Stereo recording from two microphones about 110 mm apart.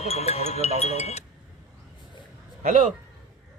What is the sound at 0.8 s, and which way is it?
Speech, 75° left (ahead or behind).